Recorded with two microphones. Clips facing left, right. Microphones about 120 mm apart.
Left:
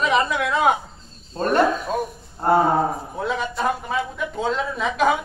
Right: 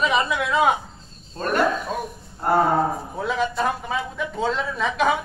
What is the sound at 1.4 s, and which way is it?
Speech, 30° left (ahead or behind).